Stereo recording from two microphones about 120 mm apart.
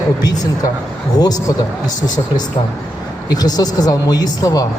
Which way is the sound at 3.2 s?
35° left (ahead or behind).